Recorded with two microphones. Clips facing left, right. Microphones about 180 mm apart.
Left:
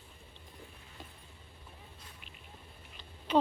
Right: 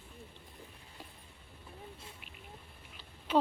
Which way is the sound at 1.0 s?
10° right (ahead or behind).